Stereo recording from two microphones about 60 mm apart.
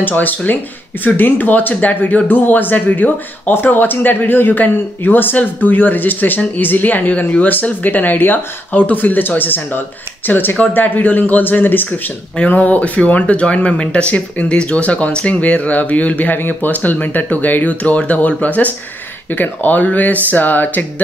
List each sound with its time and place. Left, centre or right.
0.0 s speech: left